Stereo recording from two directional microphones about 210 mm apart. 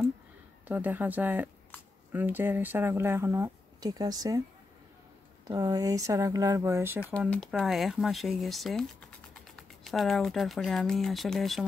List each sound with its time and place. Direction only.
0.7 s speech: 10° right (ahead or behind)
5.5 s speech: 15° right (ahead or behind)
7.2 s speech: 5° left (ahead or behind)